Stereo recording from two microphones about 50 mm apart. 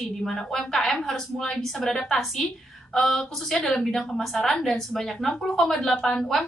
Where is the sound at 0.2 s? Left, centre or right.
Centre.